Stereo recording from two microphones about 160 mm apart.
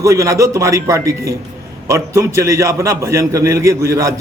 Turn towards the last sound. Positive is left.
turn(degrees=-20)  # may be behind; listen again after turning